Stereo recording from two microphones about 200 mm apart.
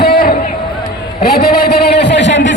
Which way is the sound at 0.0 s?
50° left (ahead or behind).